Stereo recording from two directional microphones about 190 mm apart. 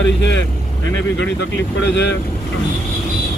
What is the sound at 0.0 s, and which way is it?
Vehicle, 70° left (ahead or behind).